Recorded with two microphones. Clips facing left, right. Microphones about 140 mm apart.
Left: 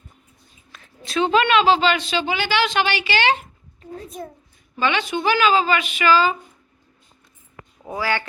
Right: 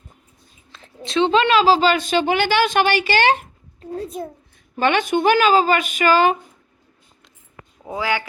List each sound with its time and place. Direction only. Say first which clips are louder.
0.7 s a woman's voice: right 3 dB; 25° right (ahead or behind)
4.8 s speech: right 4 dB; 50° right (ahead or behind)
7.9 s speech: right 1 dB; 20° right (ahead or behind)